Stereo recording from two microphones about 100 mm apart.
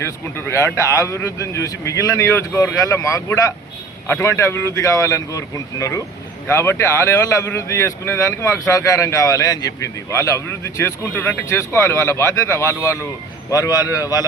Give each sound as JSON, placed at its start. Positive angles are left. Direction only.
{"t": 0.0, "sound": "a man's voice", "side_deg": 25}